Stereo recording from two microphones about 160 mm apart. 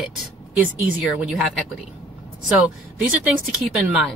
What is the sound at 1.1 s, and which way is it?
Speech, centre (ahead or behind).